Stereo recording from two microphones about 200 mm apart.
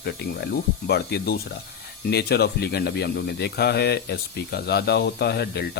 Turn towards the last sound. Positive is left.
turn(degrees=55)  # may be behind; listen again after turning